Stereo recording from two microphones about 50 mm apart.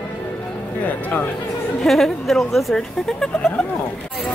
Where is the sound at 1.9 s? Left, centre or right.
Centre.